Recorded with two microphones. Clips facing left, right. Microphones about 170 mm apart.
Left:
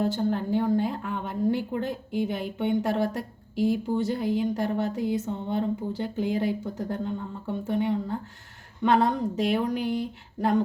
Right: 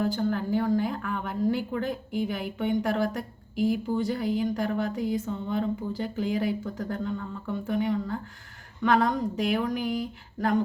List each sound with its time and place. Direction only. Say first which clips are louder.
0.0 s speech: left 1 dB; 25° left (ahead or behind)